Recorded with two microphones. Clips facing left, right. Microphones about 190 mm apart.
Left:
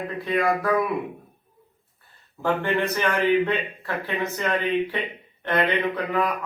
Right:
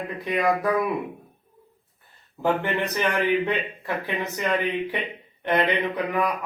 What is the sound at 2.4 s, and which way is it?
A man's voice, 15° right (ahead or behind).